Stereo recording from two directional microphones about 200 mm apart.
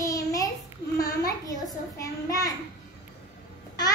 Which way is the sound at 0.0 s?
15° left (ahead or behind).